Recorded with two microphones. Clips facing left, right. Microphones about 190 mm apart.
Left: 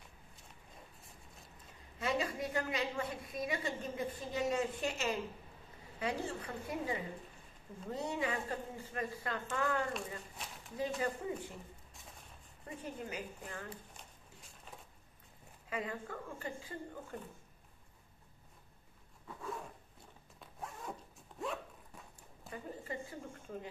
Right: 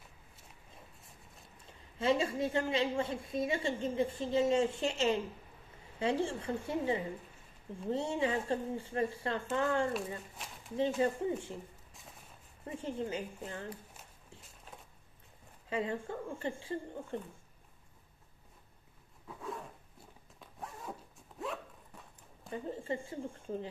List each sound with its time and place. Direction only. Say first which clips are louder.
1.7 s a woman's voice: right 6 dB; 30° right (ahead or behind)
9.9 s speech: right 4 dB; centre (ahead or behind)
11.0 s a woman's voice: right 6 dB; 25° right (ahead or behind)
12.6 s a woman's voice: right 6 dB; 25° right (ahead or behind)
14.4 s a sound: even; centre (ahead or behind)
15.7 s a woman's voice: right 5 dB; 25° right (ahead or behind)
19.2 s a sound: right 1 dB; centre (ahead or behind)
20.3 s zipper: right 1 dB; centre (ahead or behind)
22.5 s a woman's voice: right 6 dB; 25° right (ahead or behind)